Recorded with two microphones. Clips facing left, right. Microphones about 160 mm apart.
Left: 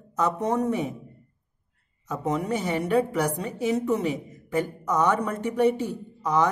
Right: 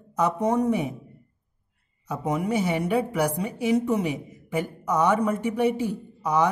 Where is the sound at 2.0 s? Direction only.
10° right (ahead or behind).